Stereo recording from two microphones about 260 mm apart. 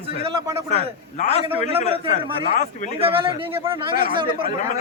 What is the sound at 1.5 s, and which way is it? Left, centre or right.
Speech, right.